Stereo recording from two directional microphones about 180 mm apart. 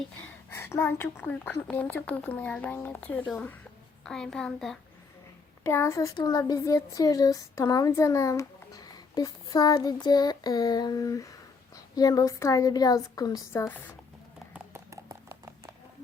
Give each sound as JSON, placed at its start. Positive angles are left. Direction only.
{"t": 0.2, "sound": "a woman's voice", "side_deg": 10}
{"t": 5.6, "sound": "speech", "side_deg": 15}
{"t": 14.5, "sound": "a sound", "side_deg": -15}